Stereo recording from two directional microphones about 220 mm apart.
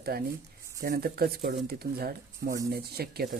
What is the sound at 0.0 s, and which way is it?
Speech, 45° right (ahead or behind).